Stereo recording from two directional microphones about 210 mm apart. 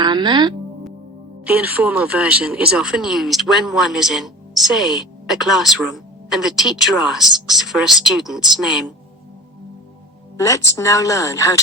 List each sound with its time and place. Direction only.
0.0 s music: 20° right (ahead or behind)
1.5 s speech: 5° right (ahead or behind)
10.3 s a woman's voice: 15° left (ahead or behind)